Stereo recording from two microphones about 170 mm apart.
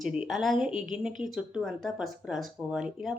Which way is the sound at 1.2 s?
5° right (ahead or behind).